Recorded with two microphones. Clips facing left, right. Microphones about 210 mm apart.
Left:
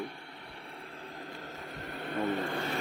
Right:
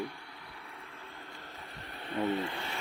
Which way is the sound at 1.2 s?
40° left (ahead or behind).